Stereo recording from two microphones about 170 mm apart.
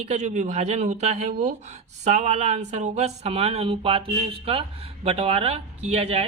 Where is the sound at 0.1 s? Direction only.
45° right (ahead or behind).